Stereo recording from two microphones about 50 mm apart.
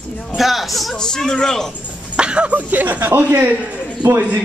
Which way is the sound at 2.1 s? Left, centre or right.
Right.